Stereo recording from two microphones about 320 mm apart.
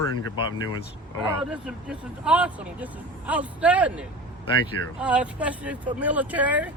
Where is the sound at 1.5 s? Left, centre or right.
Centre.